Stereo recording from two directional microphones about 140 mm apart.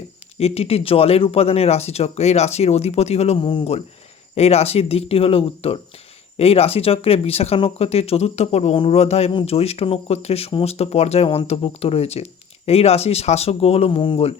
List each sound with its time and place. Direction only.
0.3 s speech: 45° left (ahead or behind)